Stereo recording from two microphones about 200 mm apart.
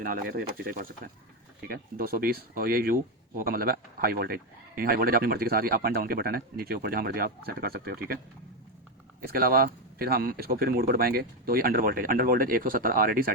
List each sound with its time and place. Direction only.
0.0 s speech: 45° right (ahead or behind)
9.2 s speech: 50° right (ahead or behind)